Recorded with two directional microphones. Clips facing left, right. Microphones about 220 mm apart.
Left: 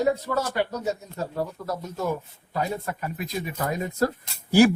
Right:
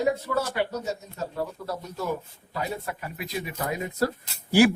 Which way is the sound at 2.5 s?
45° left (ahead or behind).